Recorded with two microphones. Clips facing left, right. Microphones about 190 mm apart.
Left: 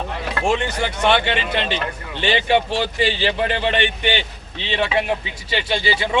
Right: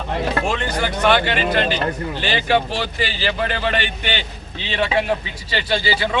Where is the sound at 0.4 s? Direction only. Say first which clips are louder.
Left 1 dB; 25° left (ahead or behind).